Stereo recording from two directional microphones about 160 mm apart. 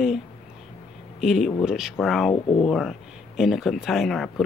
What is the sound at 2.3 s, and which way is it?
Speech, 35° left (ahead or behind).